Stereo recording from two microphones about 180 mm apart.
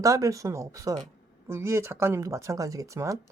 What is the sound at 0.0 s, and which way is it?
Speech, 20° right (ahead or behind).